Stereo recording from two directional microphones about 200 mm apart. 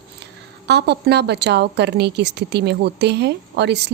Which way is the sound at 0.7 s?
60° right (ahead or behind).